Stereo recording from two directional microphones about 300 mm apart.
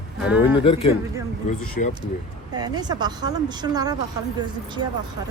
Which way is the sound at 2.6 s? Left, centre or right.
Centre.